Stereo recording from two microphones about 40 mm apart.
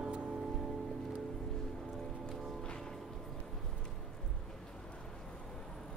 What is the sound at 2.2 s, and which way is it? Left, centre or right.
Music, centre.